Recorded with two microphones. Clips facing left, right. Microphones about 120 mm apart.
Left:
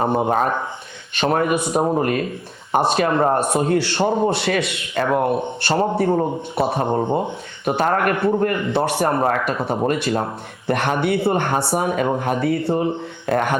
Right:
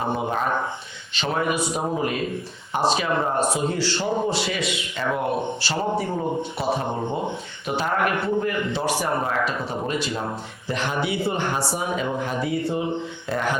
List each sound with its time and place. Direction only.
0.0 s a man's voice: 50° left (ahead or behind)